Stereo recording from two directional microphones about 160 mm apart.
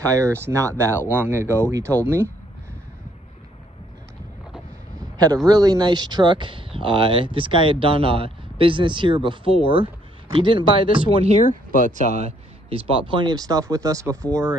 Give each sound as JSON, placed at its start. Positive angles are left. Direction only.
{"t": 0.0, "sound": "speech", "side_deg": -20}
{"t": 5.1, "sound": "a sound", "side_deg": -25}
{"t": 5.5, "sound": "speech", "side_deg": -25}
{"t": 12.6, "sound": "speech", "side_deg": -35}